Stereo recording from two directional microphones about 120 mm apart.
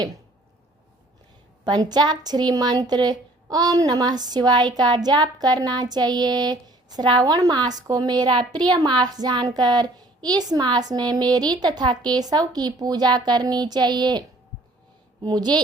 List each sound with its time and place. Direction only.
1.6 s speech: 35° right (ahead or behind)